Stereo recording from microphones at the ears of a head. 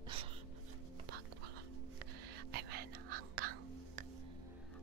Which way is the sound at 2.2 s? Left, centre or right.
Right.